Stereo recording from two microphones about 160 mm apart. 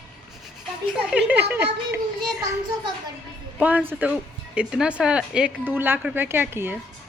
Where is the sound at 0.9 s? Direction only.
10° right (ahead or behind).